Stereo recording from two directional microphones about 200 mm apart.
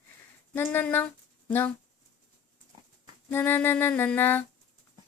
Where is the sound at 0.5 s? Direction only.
10° left (ahead or behind).